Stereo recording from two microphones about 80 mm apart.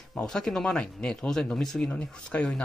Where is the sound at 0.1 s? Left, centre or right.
Centre.